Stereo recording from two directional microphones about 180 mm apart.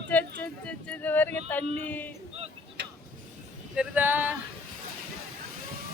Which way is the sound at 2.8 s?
75° right (ahead or behind).